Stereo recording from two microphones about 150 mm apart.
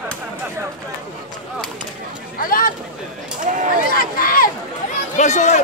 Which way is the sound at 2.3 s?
70° left (ahead or behind).